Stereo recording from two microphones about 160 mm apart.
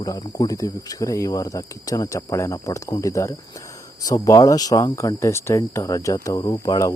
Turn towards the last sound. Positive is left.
turn(degrees=25)  # may be behind; listen again after turning